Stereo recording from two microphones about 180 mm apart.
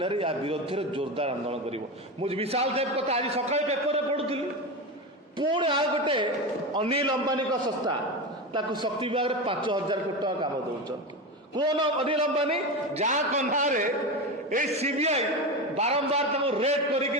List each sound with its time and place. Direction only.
0.0 s a man's voice: 30° right (ahead or behind)
5.4 s a man's voice: 25° right (ahead or behind)
8.5 s a man's voice: 25° right (ahead or behind)
11.5 s a man's voice: 25° right (ahead or behind)